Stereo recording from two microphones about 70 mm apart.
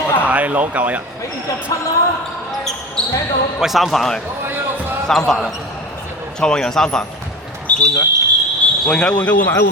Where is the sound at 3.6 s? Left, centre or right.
Centre.